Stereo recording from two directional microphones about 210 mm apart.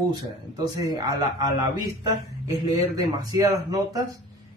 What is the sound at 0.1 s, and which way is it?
Speech, 20° right (ahead or behind).